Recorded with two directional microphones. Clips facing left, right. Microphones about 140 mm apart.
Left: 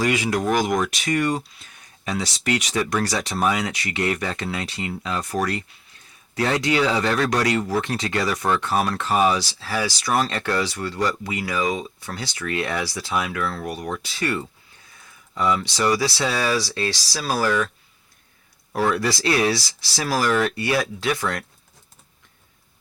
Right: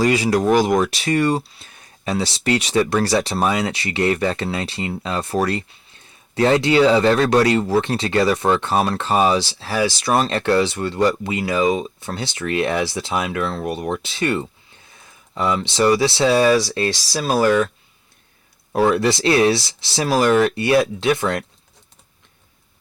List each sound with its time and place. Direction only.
0.0 s speech: 35° right (ahead or behind)
18.7 s speech: 25° right (ahead or behind)